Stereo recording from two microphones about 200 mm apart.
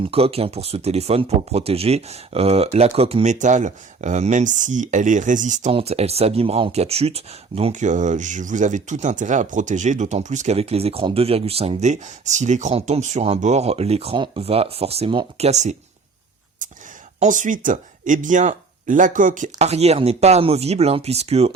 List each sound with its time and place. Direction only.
0.0 s speech: 30° right (ahead or behind)
17.2 s speech: 40° right (ahead or behind)